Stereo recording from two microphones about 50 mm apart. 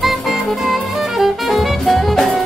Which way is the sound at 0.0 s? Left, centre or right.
Centre.